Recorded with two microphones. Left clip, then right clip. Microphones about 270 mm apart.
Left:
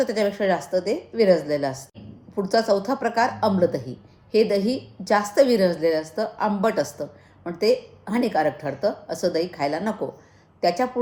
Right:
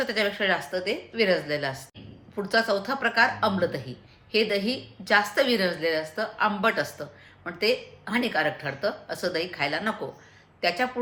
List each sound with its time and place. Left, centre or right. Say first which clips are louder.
0.0 s a woman's voice: left 3 dB; right